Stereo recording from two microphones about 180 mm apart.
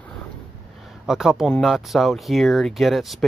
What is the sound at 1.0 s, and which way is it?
Speech, 5° right (ahead or behind).